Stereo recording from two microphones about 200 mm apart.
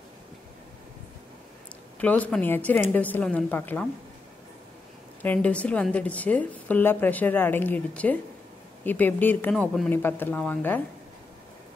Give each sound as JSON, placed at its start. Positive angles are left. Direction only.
{"t": 2.0, "sound": "a woman's voice", "side_deg": 5}
{"t": 5.2, "sound": "a woman's voice", "side_deg": 5}